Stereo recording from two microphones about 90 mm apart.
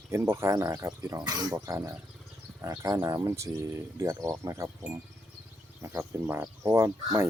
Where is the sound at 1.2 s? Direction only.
45° right (ahead or behind).